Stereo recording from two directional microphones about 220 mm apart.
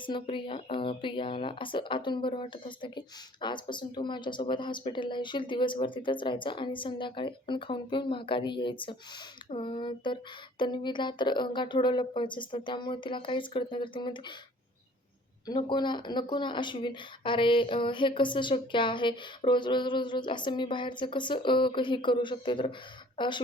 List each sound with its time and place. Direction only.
0.0 s speech: 20° left (ahead or behind)
15.4 s speech: 20° left (ahead or behind)